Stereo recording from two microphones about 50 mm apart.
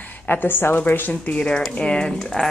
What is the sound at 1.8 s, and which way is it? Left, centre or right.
Speech, centre.